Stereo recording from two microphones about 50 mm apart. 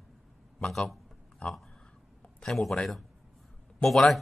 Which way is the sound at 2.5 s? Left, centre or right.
Centre.